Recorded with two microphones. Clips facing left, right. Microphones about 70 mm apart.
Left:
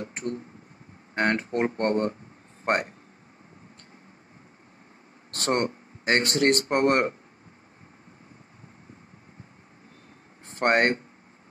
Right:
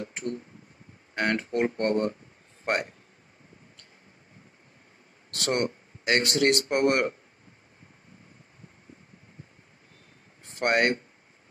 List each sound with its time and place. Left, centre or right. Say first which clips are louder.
0.0 s a sound: left 1 dB; left
1.1 s speech: left 2 dB; left
5.3 s speech: left 2 dB; left
10.4 s speech: left 2 dB; left